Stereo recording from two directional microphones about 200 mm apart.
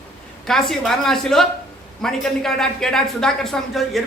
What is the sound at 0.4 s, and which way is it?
Speech, centre (ahead or behind).